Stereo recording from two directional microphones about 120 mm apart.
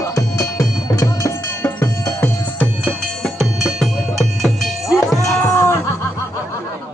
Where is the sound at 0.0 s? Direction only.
25° left (ahead or behind).